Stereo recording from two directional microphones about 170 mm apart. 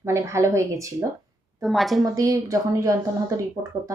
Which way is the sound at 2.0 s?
20° right (ahead or behind).